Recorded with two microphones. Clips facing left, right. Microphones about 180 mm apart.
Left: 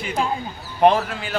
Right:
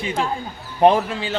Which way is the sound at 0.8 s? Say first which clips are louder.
Right 1 dB; 25° right (ahead or behind).